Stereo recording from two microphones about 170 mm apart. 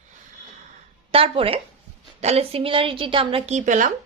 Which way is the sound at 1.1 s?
35° right (ahead or behind).